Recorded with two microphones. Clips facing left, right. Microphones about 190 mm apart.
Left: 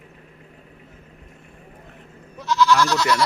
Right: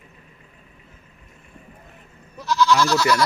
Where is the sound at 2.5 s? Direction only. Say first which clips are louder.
Even; 15° right (ahead or behind).